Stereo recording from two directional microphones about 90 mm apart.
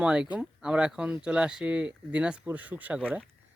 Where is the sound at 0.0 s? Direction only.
10° right (ahead or behind).